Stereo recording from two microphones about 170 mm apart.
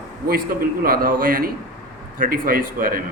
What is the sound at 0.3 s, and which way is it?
A man's voice, 60° right (ahead or behind).